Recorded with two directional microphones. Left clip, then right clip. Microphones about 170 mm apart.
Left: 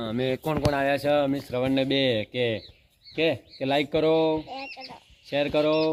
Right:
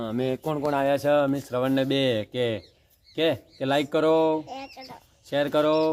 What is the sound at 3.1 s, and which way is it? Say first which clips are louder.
Speech: even; 40° right (ahead or behind).